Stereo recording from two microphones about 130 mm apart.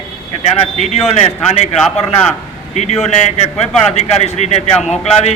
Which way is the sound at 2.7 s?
60° left (ahead or behind).